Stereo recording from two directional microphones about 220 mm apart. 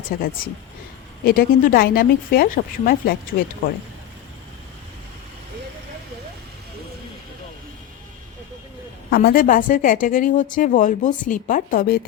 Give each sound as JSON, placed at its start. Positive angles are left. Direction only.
{"t": 0.1, "sound": "speech", "side_deg": 45}
{"t": 9.0, "sound": "a woman's voice", "side_deg": 45}